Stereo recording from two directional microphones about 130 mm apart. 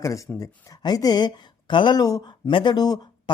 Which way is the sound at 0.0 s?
25° left (ahead or behind).